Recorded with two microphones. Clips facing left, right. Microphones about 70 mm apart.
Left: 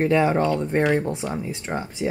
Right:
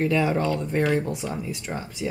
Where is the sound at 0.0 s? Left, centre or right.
Left.